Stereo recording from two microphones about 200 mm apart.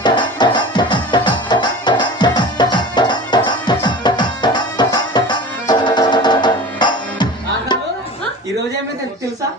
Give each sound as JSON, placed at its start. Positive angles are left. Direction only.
{"t": 0.0, "sound": "music", "side_deg": 20}